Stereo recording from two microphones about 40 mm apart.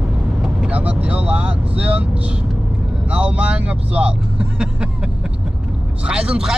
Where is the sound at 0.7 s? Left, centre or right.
Right.